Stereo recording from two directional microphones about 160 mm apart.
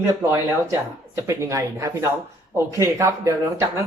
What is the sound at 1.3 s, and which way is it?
Speech, 20° right (ahead or behind).